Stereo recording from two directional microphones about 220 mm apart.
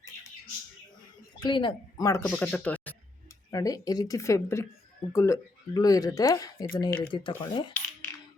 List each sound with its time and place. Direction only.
1.4 s speech: 20° left (ahead or behind)